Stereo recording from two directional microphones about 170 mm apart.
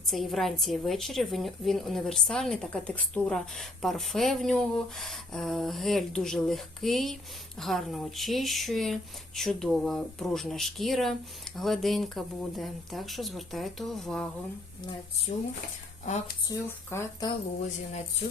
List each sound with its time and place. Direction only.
0.1 s speech: centre (ahead or behind)
15.3 s speech: 40° left (ahead or behind)
16.5 s speech: 20° left (ahead or behind)